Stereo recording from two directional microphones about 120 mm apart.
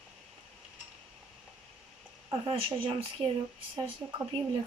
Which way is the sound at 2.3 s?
45° right (ahead or behind).